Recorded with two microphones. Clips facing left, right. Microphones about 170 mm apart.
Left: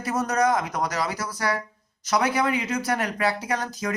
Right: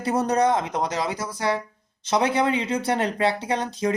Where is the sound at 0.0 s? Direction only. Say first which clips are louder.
Right 2 dB; 30° right (ahead or behind).